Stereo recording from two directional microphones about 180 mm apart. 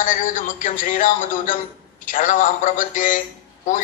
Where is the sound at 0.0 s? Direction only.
45° left (ahead or behind).